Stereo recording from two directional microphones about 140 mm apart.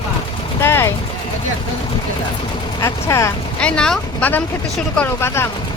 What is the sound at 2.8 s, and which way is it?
Speech, 20° left (ahead or behind).